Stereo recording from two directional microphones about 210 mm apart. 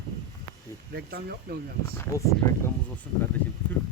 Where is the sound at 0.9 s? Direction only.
50° right (ahead or behind).